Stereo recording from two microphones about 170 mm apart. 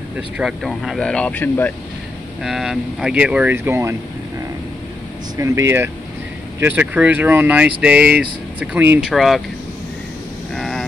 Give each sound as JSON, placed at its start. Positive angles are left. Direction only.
{"t": 0.4, "sound": "speech", "side_deg": -5}
{"t": 2.4, "sound": "speech", "side_deg": 0}
{"t": 5.4, "sound": "speech", "side_deg": -15}
{"t": 9.1, "sound": "speech", "side_deg": 0}
{"t": 10.5, "sound": "vehicle", "side_deg": 0}